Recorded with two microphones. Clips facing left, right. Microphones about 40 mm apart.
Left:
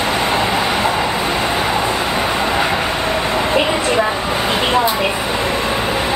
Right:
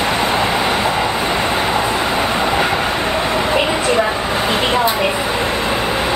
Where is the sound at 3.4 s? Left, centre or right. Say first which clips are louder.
Even; centre.